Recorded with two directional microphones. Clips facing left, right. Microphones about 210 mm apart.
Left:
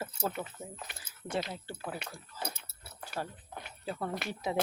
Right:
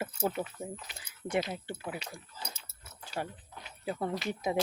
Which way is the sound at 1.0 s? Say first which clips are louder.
Right 4 dB; 15° right (ahead or behind).